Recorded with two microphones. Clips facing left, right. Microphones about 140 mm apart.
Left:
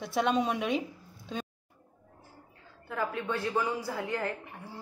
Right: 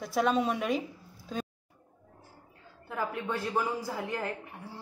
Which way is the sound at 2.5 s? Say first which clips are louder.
Right 1 dB; centre (ahead or behind).